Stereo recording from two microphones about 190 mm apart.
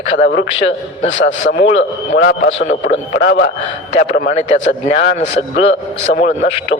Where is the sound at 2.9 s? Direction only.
60° left (ahead or behind).